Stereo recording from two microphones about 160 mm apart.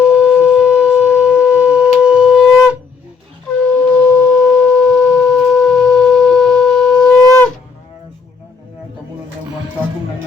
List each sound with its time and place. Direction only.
0.0 s shofar: 5° right (ahead or behind)
3.9 s wind instrument: 10° left (ahead or behind)